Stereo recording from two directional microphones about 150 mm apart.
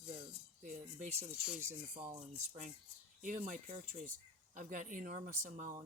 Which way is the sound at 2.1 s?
45° right (ahead or behind).